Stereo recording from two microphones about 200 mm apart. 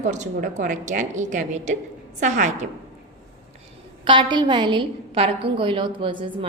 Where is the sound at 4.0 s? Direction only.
25° right (ahead or behind).